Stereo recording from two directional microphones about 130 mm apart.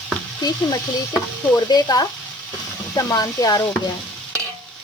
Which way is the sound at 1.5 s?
30° left (ahead or behind).